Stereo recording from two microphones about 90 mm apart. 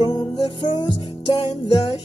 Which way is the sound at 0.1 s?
50° left (ahead or behind).